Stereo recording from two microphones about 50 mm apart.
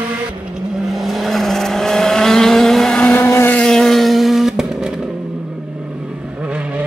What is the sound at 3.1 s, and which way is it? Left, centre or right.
Vehicle, left.